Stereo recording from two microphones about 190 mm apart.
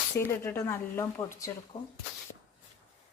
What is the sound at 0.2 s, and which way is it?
Speech, 15° left (ahead or behind).